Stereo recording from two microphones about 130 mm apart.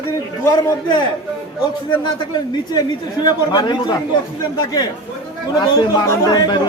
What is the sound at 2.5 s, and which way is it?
A man's voice, 30° left (ahead or behind).